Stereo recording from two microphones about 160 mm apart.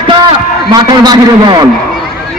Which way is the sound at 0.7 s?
25° right (ahead or behind).